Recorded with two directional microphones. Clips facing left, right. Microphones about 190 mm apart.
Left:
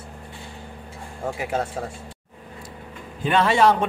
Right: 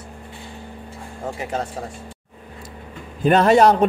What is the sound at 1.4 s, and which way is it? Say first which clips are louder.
Speech: left 1 dB; 10° left (ahead or behind).